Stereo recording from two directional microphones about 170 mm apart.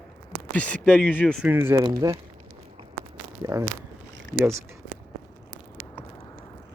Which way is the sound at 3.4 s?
20° right (ahead or behind).